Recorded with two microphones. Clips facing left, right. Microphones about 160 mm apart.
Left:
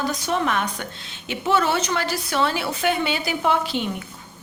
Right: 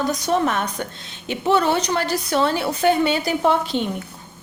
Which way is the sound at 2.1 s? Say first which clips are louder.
Right 3 dB; 20° right (ahead or behind).